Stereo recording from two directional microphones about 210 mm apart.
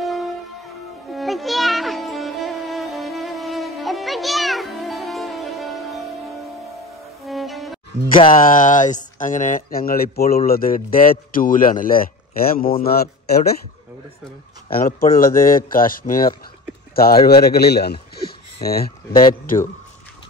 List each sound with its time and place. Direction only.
0.0 s music: centre (ahead or behind)
7.2 s music: centre (ahead or behind)
8.4 s a man's voice: 40° left (ahead or behind)
14.7 s a man's voice: 45° left (ahead or behind)
18.2 s a sound: 45° left (ahead or behind)